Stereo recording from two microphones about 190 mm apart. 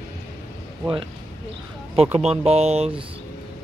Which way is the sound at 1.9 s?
30° right (ahead or behind).